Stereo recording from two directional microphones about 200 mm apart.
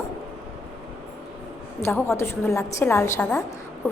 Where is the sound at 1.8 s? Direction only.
15° left (ahead or behind).